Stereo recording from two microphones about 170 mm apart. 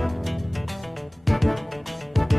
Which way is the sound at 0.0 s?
Centre (ahead or behind).